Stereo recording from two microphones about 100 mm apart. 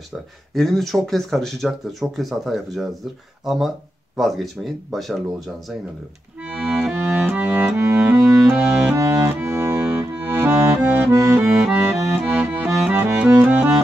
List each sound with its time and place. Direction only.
0.6 s speech: centre (ahead or behind)
6.4 s accordion: 10° right (ahead or behind)
7.0 s music: 20° right (ahead or behind)
8.9 s accordion: 30° right (ahead or behind); by 13.7 s 15° right (ahead or behind)